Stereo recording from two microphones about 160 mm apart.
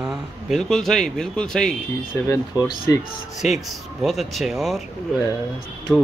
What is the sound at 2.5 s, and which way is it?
Speech, 25° left (ahead or behind).